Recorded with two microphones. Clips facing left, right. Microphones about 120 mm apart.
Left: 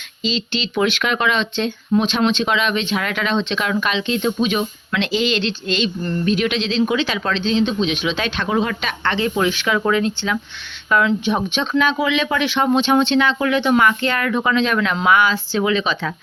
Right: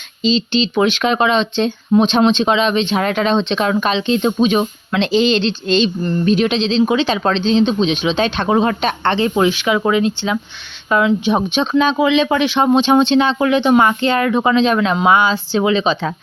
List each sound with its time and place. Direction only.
0.2 s speech: 25° right (ahead or behind)